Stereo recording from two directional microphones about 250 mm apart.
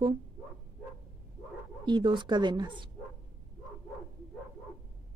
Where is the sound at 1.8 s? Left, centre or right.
Centre.